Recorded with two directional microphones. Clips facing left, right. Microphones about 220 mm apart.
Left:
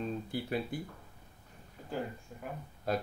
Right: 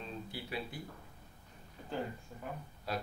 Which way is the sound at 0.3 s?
50° left (ahead or behind).